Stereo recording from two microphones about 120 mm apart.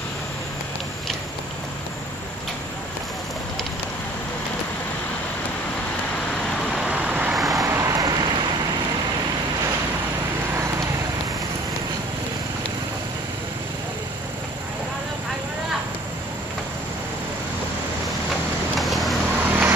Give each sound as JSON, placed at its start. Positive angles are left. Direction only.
{"t": 6.5, "sound": "vehicle", "side_deg": 0}
{"t": 7.6, "sound": "a sound", "side_deg": -25}
{"t": 18.8, "sound": "vehicle", "side_deg": 0}
{"t": 19.4, "sound": "vehicle", "side_deg": -15}